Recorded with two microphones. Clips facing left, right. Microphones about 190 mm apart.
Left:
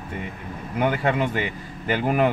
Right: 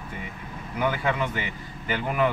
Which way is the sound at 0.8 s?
35° left (ahead or behind).